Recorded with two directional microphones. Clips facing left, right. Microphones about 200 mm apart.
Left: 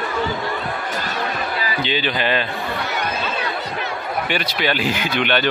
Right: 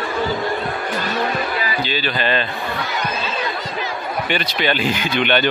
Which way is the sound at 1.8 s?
20° left (ahead or behind).